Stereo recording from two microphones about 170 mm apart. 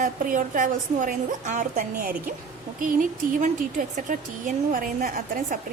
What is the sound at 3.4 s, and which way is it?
A woman's voice, 50° right (ahead or behind).